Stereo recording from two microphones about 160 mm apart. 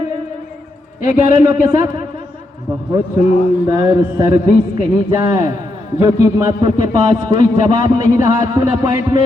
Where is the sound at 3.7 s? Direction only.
25° right (ahead or behind).